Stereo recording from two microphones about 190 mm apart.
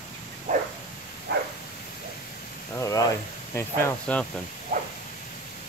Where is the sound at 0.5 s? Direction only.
40° right (ahead or behind).